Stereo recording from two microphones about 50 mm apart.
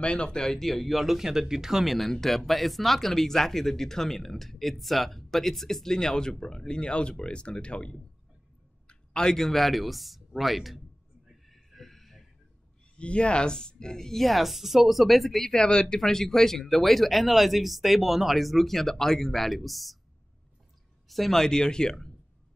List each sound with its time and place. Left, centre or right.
0.0 s speech: centre
11.4 s a sound: centre
12.9 s speech: left; by 15.5 s centre
15.5 s speech: centre
21.1 s speech: centre